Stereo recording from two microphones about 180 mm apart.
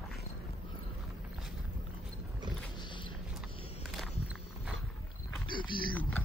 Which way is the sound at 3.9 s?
Centre (ahead or behind).